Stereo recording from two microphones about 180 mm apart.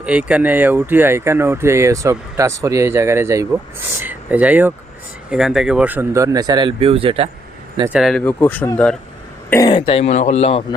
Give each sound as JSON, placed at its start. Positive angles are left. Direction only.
{"t": 0.0, "sound": "speech", "side_deg": -5}
{"t": 7.9, "sound": "speech", "side_deg": 0}
{"t": 9.7, "sound": "a man's voice", "side_deg": 30}